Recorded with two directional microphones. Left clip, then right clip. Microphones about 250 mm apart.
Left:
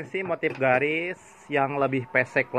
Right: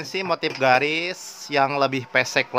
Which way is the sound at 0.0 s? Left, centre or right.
Centre.